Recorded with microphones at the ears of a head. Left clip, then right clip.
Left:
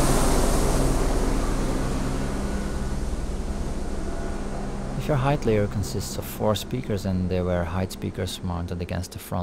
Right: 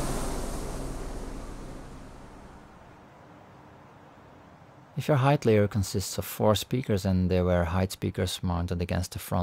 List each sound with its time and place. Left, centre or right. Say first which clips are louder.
0.0 s vehicle: left 11 dB; left
5.0 s speech: even; centre